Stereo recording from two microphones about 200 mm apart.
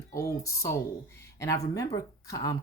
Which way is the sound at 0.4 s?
15° left (ahead or behind).